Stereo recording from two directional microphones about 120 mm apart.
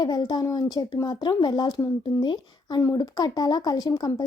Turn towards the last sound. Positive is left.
turn(degrees=30)  # may be behind; listen again after turning